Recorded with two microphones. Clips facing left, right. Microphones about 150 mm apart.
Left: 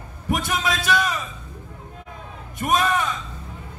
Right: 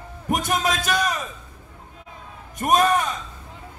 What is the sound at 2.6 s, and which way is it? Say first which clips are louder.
Speech: right 2 dB; 45° right (ahead or behind).